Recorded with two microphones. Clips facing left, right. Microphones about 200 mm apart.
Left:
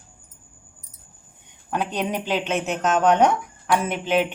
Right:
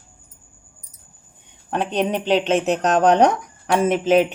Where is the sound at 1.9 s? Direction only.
30° right (ahead or behind).